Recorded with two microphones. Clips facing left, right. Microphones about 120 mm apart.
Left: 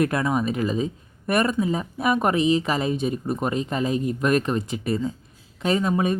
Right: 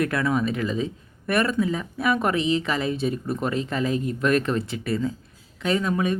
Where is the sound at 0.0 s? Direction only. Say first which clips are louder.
Left 1 dB; 20° left (ahead or behind).